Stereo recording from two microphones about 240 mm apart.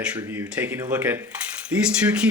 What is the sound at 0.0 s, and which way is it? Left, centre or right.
Speech, centre.